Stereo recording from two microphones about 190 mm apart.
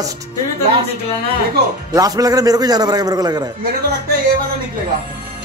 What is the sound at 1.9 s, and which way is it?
A man's voice, 20° right (ahead or behind).